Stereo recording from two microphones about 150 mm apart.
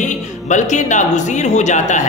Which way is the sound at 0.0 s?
55° left (ahead or behind).